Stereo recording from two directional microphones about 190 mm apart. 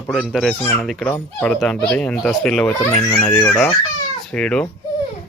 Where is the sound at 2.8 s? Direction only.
25° left (ahead or behind).